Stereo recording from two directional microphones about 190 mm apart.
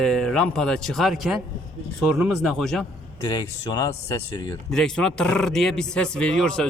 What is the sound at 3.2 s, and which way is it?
Speech, 20° left (ahead or behind).